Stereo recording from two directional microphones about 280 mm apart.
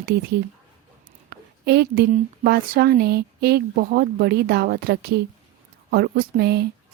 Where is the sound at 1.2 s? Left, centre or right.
Right.